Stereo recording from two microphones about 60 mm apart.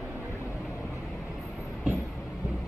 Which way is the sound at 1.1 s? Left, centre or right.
Centre.